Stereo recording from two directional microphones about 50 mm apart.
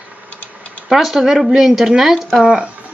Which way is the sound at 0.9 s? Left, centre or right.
Centre.